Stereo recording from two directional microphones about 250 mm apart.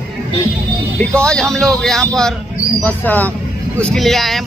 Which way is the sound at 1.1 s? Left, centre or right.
Centre.